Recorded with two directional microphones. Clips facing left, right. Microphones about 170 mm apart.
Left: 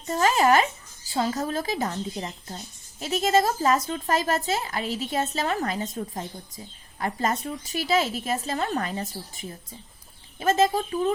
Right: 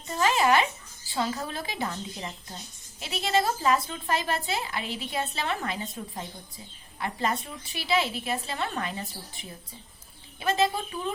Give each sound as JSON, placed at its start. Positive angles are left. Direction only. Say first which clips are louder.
{"t": 0.1, "sound": "a woman's voice", "louder": "left 3 dB", "side_deg": 40}